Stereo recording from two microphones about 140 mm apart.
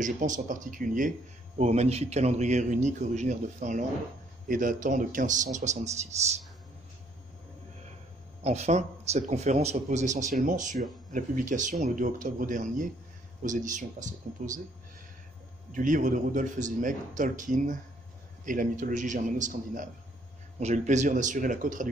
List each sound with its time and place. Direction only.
0.0 s speech: 65° right (ahead or behind)
1.6 s speech: 50° right (ahead or behind)
8.5 s speech: 50° right (ahead or behind)
15.7 s speech: 70° right (ahead or behind)
20.5 s speech: 55° right (ahead or behind)